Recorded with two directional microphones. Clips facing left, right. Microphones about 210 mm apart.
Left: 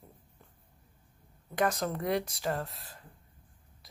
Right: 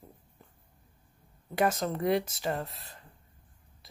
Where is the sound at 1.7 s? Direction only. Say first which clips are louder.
Right 3 dB; centre (ahead or behind).